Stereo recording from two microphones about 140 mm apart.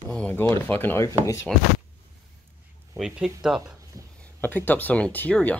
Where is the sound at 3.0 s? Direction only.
5° right (ahead or behind).